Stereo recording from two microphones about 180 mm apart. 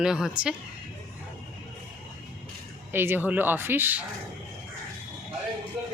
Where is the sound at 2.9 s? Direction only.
10° right (ahead or behind).